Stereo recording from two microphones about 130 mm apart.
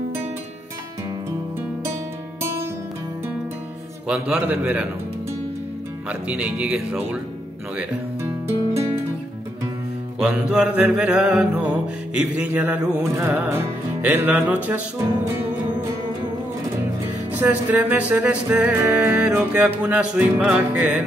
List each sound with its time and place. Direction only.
4.1 s music: 10° right (ahead or behind)
6.0 s music: 10° right (ahead or behind)
7.7 s speech: 15° right (ahead or behind)
10.1 s music: 10° right (ahead or behind)
17.4 s music: 15° right (ahead or behind)